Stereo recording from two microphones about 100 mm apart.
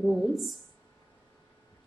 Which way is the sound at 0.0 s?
5° right (ahead or behind).